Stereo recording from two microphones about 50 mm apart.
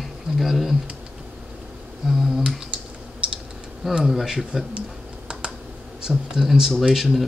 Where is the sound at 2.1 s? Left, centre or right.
Centre.